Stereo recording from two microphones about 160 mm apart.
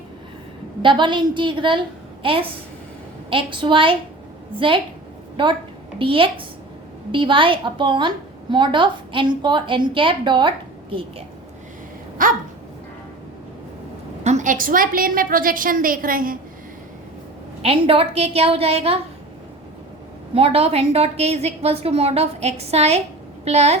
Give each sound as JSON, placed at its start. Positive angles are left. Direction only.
{"t": 0.8, "sound": "a woman's voice", "side_deg": -30}
{"t": 5.4, "sound": "a woman's voice", "side_deg": -30}
{"t": 12.2, "sound": "a woman's voice", "side_deg": -60}
{"t": 14.3, "sound": "a woman's voice", "side_deg": -50}
{"t": 17.6, "sound": "a woman's voice", "side_deg": -35}
{"t": 20.3, "sound": "a woman's voice", "side_deg": -35}